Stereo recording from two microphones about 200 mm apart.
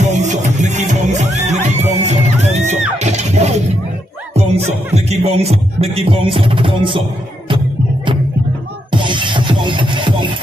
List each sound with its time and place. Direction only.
0.0 s music: 35° right (ahead or behind)
4.9 s music: 30° right (ahead or behind)